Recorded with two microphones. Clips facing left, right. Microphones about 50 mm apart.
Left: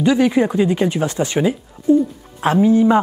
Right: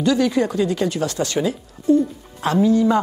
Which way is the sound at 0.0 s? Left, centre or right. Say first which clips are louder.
Left 3 dB; left.